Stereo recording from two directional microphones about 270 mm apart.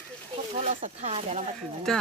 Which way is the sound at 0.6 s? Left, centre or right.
Right.